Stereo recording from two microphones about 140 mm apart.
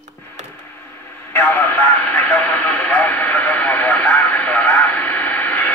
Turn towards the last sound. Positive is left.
turn(degrees=10)  # may be behind; listen again after turning